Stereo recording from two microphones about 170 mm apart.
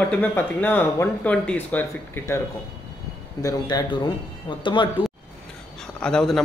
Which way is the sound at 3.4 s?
20° left (ahead or behind).